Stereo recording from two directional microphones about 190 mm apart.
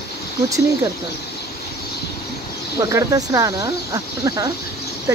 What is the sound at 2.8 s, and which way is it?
Speech, 15° right (ahead or behind).